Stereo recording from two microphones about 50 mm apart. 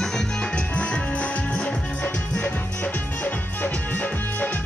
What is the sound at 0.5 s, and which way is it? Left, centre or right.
Music, left.